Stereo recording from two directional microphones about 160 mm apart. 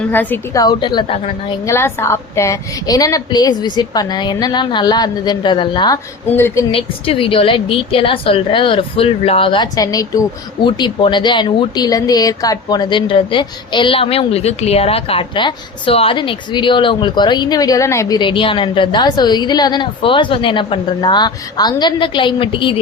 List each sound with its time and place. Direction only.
0.0 s a woman's voice: 10° left (ahead or behind)
0.6 s a woman's voice: 25° left (ahead or behind)
1.6 s a woman's voice: 15° left (ahead or behind)
6.3 s a woman's voice: 15° left (ahead or behind)
6.7 s a woman's voice: 35° left (ahead or behind)